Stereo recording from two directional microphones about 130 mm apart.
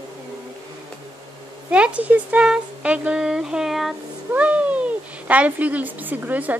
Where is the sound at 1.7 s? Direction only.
10° right (ahead or behind).